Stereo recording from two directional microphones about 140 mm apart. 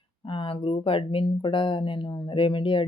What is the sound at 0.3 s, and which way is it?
Speech, 40° left (ahead or behind).